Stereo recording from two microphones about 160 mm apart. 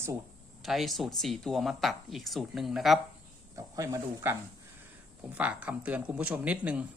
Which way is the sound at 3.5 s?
20° right (ahead or behind).